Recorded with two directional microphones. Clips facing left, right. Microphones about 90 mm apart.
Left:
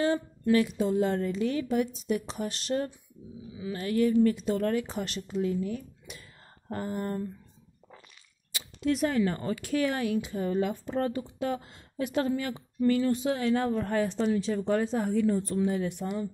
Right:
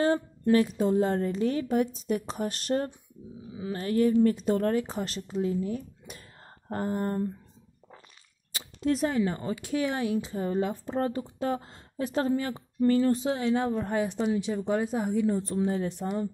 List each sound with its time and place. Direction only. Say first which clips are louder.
0.0 s speech: right 2 dB; 40° right (ahead or behind)
6.1 s whispering: right 1 dB; 40° right (ahead or behind)
6.7 s speech: right 3 dB; 35° right (ahead or behind)
8.5 s a sound: right 1 dB; 40° right (ahead or behind)
9.1 s speech: even; 15° right (ahead or behind); by 13.3 s 35° right (ahead or behind)
13.3 s a woman's voice: even; 20° right (ahead or behind)
15.2 s speech: even; 25° right (ahead or behind)